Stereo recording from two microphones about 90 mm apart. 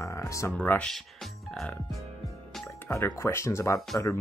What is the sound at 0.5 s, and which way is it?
Speech, 20° left (ahead or behind).